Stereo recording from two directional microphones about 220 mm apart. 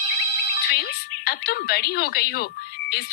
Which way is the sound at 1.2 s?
45° left (ahead or behind).